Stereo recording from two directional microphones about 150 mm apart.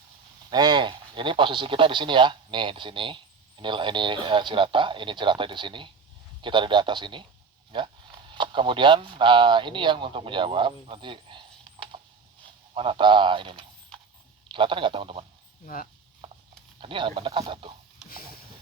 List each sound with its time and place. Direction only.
0.5 s speech: 30° right (ahead or behind)
11.9 s a sound: 35° right (ahead or behind)
12.7 s speech: 35° right (ahead or behind)
15.6 s speech: 70° left (ahead or behind)
16.8 s speech: 35° right (ahead or behind)